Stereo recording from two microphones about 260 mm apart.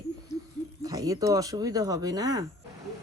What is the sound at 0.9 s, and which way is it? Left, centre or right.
Speech, centre.